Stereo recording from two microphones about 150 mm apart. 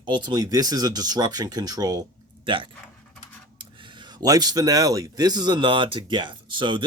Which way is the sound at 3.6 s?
30° right (ahead or behind).